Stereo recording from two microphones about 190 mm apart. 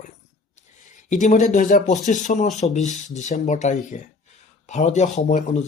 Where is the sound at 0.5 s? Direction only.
40° left (ahead or behind).